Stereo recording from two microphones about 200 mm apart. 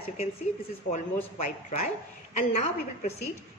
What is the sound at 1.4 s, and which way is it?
A woman's voice, 35° left (ahead or behind).